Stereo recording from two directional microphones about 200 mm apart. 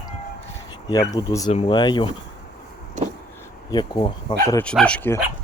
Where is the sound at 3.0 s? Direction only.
35° right (ahead or behind).